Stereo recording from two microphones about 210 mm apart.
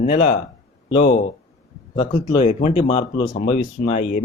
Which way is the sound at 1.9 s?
25° left (ahead or behind).